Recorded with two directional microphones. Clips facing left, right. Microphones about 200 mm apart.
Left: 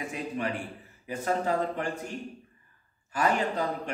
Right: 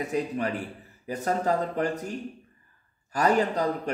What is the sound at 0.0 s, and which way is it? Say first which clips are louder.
A man's voice: right 5 dB; 40° right (ahead or behind).